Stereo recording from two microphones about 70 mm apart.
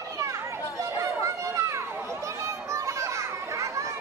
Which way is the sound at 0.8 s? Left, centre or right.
Right.